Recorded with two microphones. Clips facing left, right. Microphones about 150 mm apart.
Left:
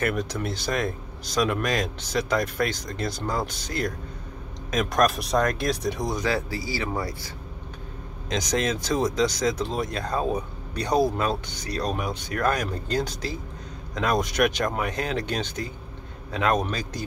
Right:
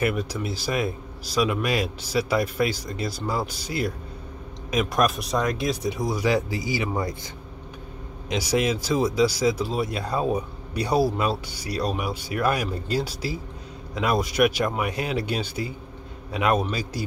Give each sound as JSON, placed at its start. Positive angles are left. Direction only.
{"t": 0.0, "sound": "speech", "side_deg": -5}
{"t": 6.2, "sound": "speech", "side_deg": -15}
{"t": 8.3, "sound": "a man's voice", "side_deg": -10}